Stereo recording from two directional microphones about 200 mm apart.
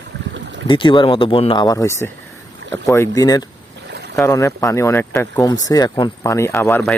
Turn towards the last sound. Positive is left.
turn(degrees=10)  # may be behind; listen again after turning